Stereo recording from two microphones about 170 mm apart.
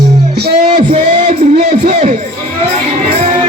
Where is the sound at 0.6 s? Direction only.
40° right (ahead or behind).